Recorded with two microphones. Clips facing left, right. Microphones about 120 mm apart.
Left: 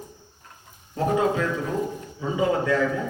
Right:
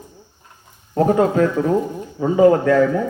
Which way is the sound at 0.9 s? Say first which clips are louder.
Right 7 dB; 45° right (ahead or behind).